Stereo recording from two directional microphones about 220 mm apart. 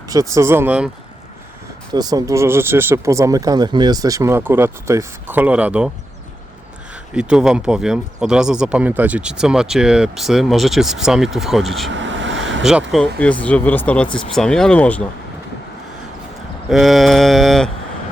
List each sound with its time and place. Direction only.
0.1 s speech: 15° right (ahead or behind)
1.9 s speech: 15° right (ahead or behind)
7.1 s speech: 5° right (ahead or behind)
11.9 s vehicle: 55° right (ahead or behind)
12.9 s speech: 5° left (ahead or behind)
16.6 s speech: centre (ahead or behind)